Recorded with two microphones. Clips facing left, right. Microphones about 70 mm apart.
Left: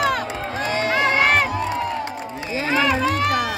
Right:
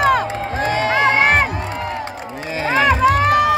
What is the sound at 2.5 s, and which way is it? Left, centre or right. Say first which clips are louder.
Run: right 4 dB; right.